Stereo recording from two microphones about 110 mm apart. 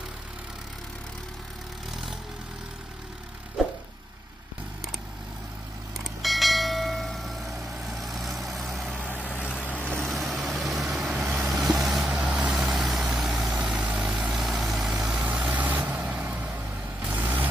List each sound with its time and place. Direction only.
6.2 s bell: centre (ahead or behind)
9.0 s vehicle: 15° left (ahead or behind)
9.9 s vehicle: centre (ahead or behind); by 17.5 s 15° right (ahead or behind)